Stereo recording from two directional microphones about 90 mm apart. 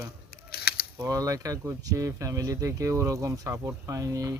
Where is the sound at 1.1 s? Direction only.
40° right (ahead or behind).